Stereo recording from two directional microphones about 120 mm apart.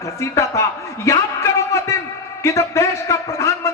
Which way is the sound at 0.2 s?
25° left (ahead or behind).